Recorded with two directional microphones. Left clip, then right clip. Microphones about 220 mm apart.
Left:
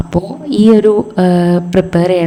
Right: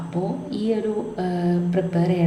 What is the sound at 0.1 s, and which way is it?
A woman's voice, 45° left (ahead or behind).